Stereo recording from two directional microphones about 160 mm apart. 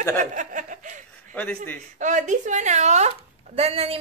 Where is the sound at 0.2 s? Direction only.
50° right (ahead or behind).